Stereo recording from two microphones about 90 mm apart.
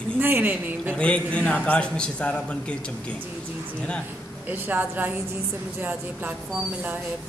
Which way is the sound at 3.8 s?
10° left (ahead or behind).